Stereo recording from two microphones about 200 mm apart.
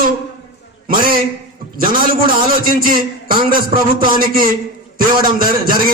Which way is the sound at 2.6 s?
45° right (ahead or behind).